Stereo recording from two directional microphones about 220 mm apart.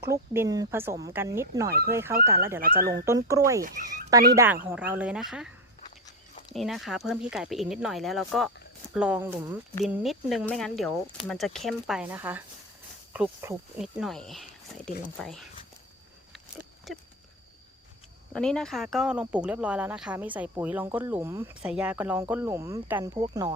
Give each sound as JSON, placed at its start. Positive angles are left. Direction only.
{"t": 0.1, "sound": "speech", "side_deg": -15}
{"t": 3.6, "sound": "speech", "side_deg": -40}
{"t": 4.4, "sound": "speech", "side_deg": -10}
{"t": 6.5, "sound": "speech", "side_deg": 0}
{"t": 16.3, "sound": "a sound", "side_deg": 0}
{"t": 18.3, "sound": "speech", "side_deg": 5}